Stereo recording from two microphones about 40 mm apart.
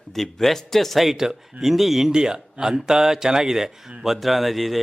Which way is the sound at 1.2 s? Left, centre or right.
Centre.